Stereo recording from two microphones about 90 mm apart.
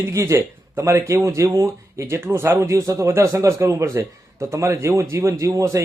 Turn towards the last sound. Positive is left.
turn(degrees=-35)  # may be behind; listen again after turning